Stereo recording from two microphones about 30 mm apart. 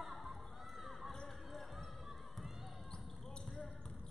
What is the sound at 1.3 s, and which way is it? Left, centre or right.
Basketball bounce, centre.